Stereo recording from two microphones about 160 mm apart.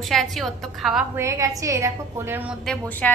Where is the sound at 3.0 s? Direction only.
10° left (ahead or behind).